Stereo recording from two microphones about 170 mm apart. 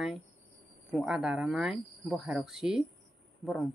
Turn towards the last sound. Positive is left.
turn(degrees=0)  # may be behind; listen again after turning